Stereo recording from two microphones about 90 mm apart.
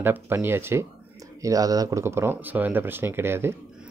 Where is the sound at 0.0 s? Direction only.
25° right (ahead or behind).